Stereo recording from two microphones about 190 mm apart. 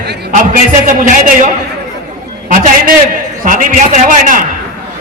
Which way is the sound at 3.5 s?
45° right (ahead or behind).